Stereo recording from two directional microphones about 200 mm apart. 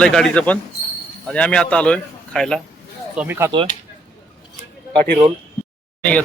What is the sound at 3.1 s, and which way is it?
Speech, 10° right (ahead or behind).